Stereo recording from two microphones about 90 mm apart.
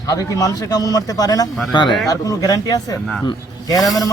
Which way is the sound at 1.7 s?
55° left (ahead or behind).